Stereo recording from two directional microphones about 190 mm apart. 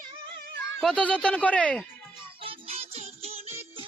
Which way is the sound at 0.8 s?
5° left (ahead or behind).